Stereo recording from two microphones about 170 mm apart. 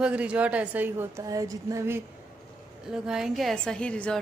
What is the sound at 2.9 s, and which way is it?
A woman's voice, 5° right (ahead or behind).